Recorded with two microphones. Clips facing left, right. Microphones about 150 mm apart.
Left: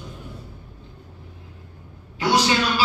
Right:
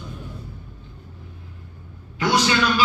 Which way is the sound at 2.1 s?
35° left (ahead or behind).